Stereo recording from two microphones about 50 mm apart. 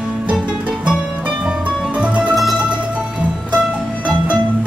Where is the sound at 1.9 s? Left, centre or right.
Right.